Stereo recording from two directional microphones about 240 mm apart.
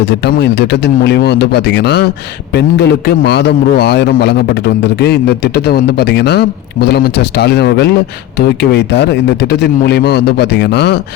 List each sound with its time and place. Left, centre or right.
0.0 s a man's voice: left